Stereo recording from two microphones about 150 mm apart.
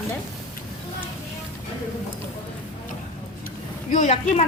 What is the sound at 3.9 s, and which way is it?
Speech, 55° left (ahead or behind).